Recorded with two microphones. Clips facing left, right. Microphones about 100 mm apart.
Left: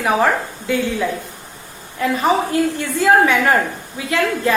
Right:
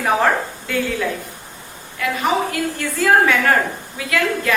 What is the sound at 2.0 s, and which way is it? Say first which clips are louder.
A woman's voice: left 3 dB; 30° left (ahead or behind).